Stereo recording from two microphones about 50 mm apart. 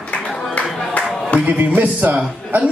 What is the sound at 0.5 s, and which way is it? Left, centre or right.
Music, left.